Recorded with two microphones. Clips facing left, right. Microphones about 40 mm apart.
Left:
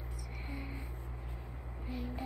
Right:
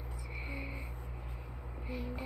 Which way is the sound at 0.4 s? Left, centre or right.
Centre.